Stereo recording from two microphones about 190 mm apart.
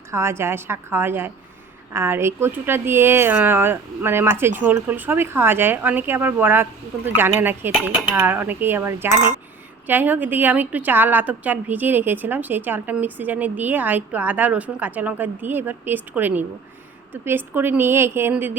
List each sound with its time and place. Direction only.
0.1 s a woman's voice: 15° right (ahead or behind)